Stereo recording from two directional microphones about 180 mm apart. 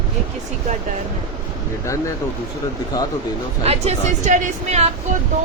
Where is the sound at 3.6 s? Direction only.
35° right (ahead or behind).